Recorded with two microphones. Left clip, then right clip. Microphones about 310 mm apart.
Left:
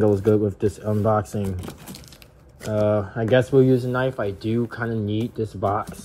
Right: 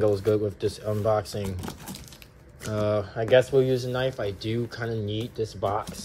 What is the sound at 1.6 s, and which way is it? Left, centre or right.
Speech, centre.